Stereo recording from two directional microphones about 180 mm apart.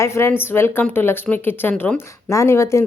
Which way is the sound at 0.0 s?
15° left (ahead or behind).